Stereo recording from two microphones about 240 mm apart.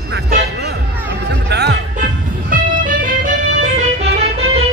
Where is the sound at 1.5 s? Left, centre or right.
Right.